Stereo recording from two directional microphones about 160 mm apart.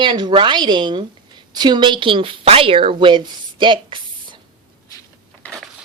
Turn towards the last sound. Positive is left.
turn(degrees=5)  # may be behind; listen again after turning